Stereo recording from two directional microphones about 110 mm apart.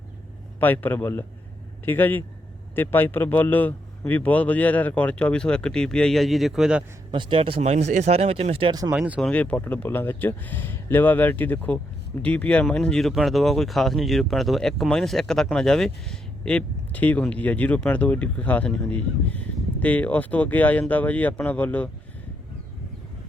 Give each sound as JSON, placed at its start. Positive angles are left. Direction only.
{"t": 0.6, "sound": "speech", "side_deg": 15}
{"t": 7.1, "sound": "speech", "side_deg": -50}
{"t": 7.6, "sound": "speech", "side_deg": -85}
{"t": 8.9, "sound": "speech", "side_deg": -10}
{"t": 9.2, "sound": "speech", "side_deg": 10}